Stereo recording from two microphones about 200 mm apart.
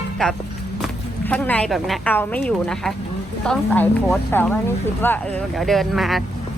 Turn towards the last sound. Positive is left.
turn(degrees=0)  # may be behind; listen again after turning